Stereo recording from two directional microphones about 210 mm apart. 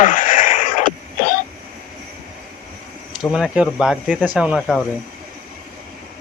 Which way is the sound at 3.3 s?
5° right (ahead or behind).